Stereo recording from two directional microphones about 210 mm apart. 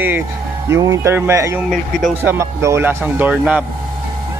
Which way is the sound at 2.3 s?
15° right (ahead or behind).